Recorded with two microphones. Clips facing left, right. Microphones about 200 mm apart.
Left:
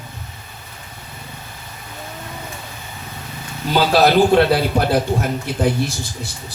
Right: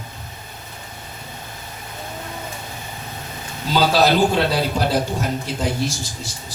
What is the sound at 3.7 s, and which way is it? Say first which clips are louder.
A man's voice: left 2 dB; 55° left (ahead or behind).